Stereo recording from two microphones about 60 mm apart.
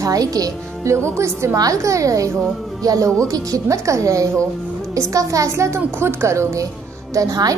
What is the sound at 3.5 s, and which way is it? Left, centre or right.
A child's voice, right.